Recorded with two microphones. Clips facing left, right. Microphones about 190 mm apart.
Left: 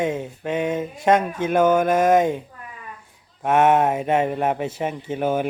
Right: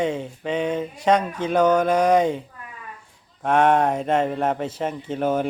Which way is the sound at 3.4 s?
5° left (ahead or behind).